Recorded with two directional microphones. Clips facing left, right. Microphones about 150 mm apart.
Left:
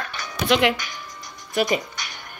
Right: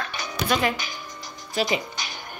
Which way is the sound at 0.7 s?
30° right (ahead or behind).